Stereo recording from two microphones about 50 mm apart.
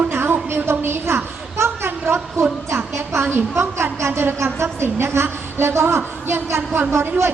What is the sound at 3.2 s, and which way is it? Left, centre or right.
A woman's voice, right.